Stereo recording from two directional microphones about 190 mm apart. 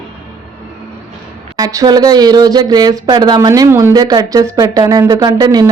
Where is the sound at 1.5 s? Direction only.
20° right (ahead or behind).